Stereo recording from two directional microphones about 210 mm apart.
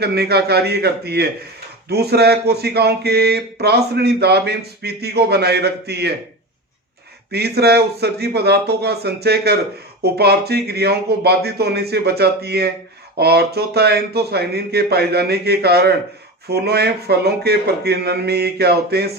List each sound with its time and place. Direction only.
0.0 s speech: 50° right (ahead or behind)
7.3 s speech: 50° right (ahead or behind)